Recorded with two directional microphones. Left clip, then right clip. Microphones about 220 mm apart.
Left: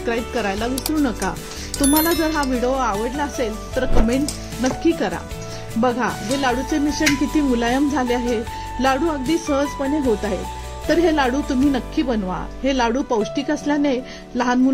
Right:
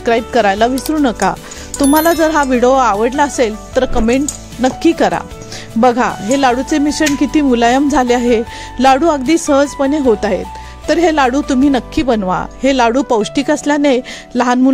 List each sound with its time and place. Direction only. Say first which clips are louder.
0.0 s speech: right 11 dB; 45° right (ahead or behind)
2.1 s speech: right 9 dB; 45° right (ahead or behind)